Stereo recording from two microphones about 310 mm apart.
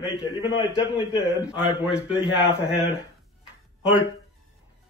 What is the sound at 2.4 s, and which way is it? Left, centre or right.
Speech, centre.